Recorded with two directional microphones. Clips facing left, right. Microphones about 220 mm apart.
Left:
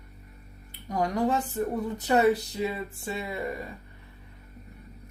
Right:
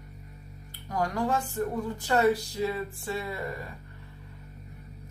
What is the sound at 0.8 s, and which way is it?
Speech, 20° left (ahead or behind).